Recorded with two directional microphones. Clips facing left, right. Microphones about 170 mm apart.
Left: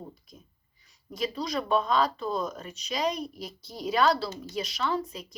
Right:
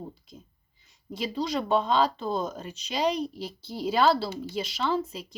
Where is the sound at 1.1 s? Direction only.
25° right (ahead or behind).